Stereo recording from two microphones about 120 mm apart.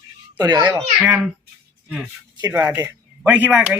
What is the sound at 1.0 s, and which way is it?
Speech, 10° right (ahead or behind).